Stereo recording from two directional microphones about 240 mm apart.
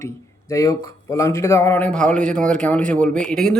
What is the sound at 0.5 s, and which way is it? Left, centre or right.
A man's voice, centre.